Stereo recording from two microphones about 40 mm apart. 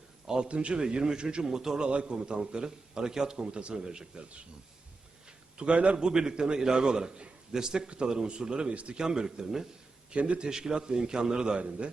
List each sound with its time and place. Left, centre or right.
0.3 s a man's voice: right
1.5 s a man's voice: centre
3.3 s a man's voice: right
5.5 s a man's voice: right
6.0 s a man's voice: centre
9.0 s speech: centre
10.1 s a man's voice: right
10.4 s a man's voice: centre